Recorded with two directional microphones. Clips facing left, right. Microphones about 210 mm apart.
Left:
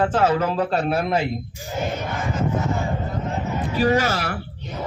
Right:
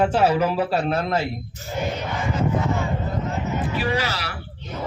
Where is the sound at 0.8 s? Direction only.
10° left (ahead or behind).